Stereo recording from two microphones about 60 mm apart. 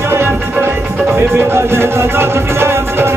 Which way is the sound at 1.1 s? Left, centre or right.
Right.